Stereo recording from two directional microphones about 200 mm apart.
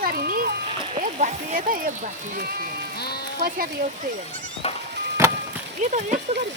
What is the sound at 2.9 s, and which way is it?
Sheep, 55° left (ahead or behind).